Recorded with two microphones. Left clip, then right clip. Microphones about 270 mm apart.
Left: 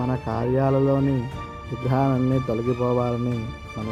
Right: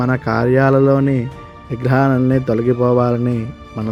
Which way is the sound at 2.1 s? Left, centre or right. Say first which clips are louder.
Right 7 dB; right.